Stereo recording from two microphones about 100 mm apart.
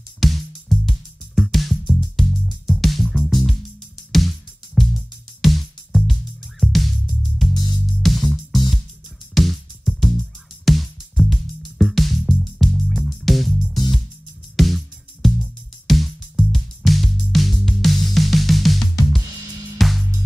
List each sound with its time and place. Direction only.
0.2 s music: centre (ahead or behind)
7.5 s music: 45° left (ahead or behind)
8.0 s music: centre (ahead or behind)
15.2 s music: centre (ahead or behind)